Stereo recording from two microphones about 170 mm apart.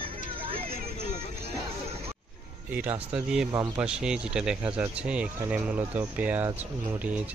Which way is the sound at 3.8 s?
5° right (ahead or behind).